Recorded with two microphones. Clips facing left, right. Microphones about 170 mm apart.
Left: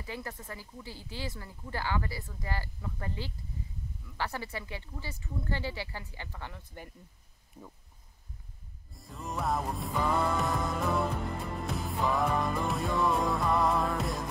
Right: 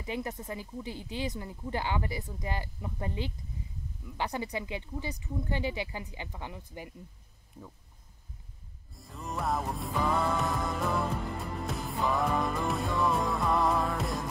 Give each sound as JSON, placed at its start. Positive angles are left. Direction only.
{"t": 0.0, "sound": "speech", "side_deg": -20}
{"t": 8.9, "sound": "music", "side_deg": 0}